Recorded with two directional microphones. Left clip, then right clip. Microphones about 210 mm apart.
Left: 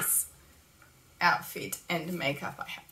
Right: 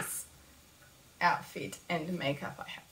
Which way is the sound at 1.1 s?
10° left (ahead or behind).